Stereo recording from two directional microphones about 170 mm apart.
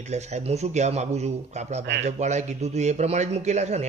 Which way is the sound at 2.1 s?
45° right (ahead or behind).